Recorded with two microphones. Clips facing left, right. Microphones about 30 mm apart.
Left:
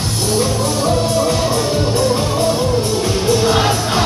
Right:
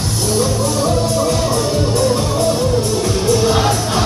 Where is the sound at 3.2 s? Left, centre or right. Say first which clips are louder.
Even; centre.